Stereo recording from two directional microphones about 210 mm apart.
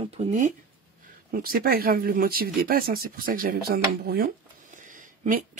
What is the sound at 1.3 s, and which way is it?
Speech, 45° right (ahead or behind).